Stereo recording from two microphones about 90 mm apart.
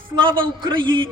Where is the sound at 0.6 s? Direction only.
60° right (ahead or behind).